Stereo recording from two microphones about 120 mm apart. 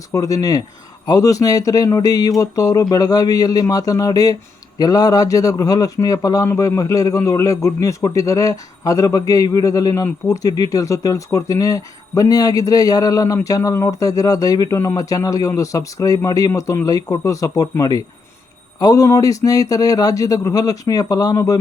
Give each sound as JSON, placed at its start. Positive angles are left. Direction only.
{"t": 0.1, "sound": "a man's voice", "side_deg": 30}